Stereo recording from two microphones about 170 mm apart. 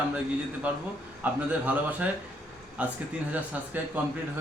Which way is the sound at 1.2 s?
10° right (ahead or behind).